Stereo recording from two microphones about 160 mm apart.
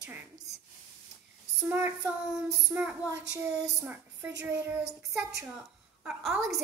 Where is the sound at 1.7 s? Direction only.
10° right (ahead or behind).